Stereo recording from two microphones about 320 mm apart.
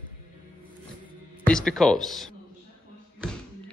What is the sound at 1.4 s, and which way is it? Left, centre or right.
Speech, centre.